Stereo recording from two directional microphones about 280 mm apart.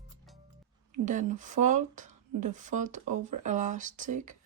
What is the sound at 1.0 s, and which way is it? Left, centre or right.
Speech, right.